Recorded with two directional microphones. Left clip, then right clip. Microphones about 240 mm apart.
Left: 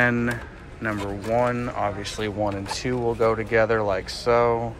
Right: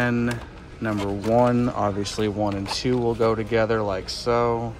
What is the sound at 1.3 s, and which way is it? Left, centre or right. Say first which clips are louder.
Speech: right 3 dB; right.